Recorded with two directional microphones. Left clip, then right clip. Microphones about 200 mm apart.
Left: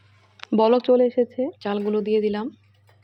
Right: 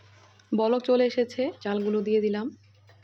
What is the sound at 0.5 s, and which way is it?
Speech, 10° left (ahead or behind).